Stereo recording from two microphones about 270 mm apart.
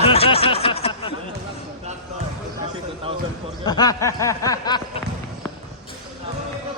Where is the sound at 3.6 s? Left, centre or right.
Centre.